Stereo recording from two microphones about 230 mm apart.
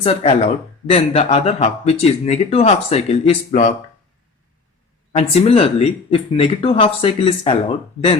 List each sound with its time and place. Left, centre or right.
0.0 s speech: left
5.1 s speech: left